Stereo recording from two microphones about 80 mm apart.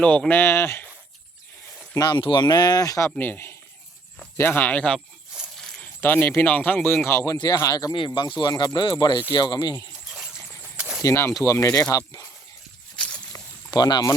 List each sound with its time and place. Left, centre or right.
0.0 s speech: centre; by 0.9 s left
2.0 s speech: left
3.2 s speech: left
5.5 s a sound: centre
6.0 s speech: left
6.9 s speech: left
7.7 s speech: left
7.9 s speech: left
9.7 s a sound: centre
11.0 s speech: left
13.3 s a sound: left
13.7 s speech: left